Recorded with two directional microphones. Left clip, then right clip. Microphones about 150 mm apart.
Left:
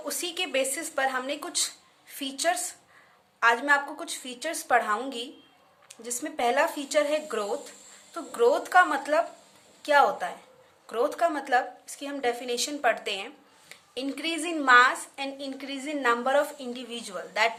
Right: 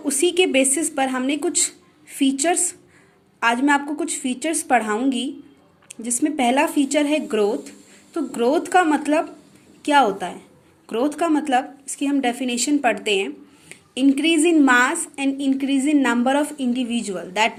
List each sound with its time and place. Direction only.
0.0 s a woman's voice: 20° right (ahead or behind)